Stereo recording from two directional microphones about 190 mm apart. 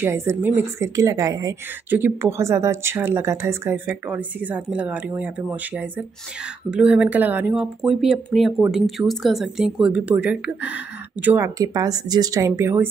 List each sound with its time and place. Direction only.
0.0 s a woman's voice: 15° right (ahead or behind)